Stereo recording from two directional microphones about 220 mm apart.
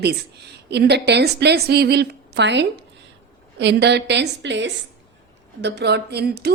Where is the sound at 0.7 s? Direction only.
50° right (ahead or behind).